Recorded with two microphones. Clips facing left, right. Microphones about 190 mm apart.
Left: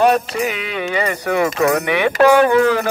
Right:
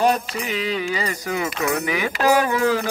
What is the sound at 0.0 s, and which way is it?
Speech, 65° left (ahead or behind).